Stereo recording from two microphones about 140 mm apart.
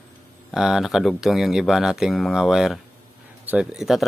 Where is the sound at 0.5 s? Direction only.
5° right (ahead or behind).